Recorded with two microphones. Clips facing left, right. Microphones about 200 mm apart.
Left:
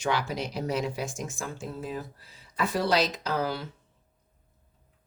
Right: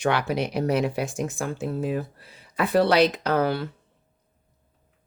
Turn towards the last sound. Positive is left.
turn(degrees=-60)  # may be behind; listen again after turning